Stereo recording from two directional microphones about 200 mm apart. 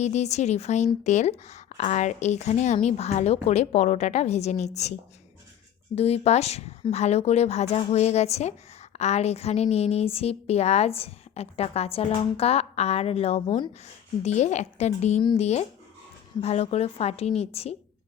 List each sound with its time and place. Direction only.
0.0 s a woman's voice: 35° left (ahead or behind)